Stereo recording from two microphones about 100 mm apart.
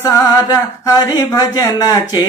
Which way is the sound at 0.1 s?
40° left (ahead or behind).